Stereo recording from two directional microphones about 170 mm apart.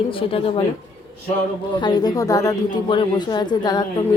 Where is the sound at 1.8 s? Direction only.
25° left (ahead or behind).